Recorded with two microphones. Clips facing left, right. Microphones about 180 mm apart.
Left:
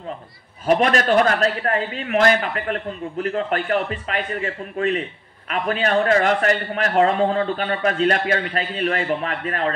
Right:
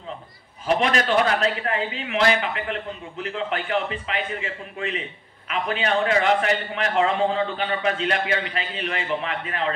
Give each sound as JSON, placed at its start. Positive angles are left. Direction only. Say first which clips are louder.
{"t": 0.7, "sound": "a man's voice", "louder": "left 4 dB", "side_deg": 45}